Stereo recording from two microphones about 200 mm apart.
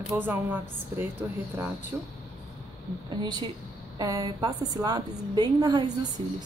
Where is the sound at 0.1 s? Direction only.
10° right (ahead or behind).